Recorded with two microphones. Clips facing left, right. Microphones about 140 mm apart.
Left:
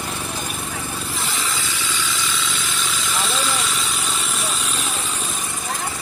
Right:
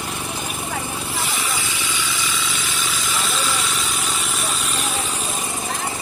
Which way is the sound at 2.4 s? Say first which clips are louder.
Even; 5° right (ahead or behind).